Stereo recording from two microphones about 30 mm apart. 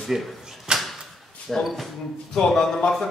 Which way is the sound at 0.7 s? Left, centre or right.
Right.